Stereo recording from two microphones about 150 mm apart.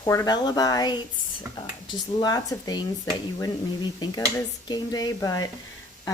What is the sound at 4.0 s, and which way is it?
Speech, 25° left (ahead or behind).